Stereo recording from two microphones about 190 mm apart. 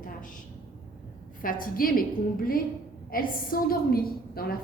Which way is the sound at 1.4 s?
50° left (ahead or behind).